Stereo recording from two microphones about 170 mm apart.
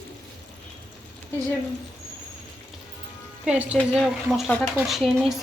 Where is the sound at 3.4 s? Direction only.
5° right (ahead or behind).